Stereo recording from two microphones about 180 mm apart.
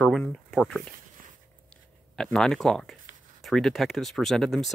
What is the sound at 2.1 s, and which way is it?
Speech, 5° left (ahead or behind).